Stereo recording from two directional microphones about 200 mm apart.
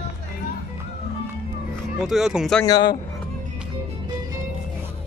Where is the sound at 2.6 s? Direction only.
20° left (ahead or behind).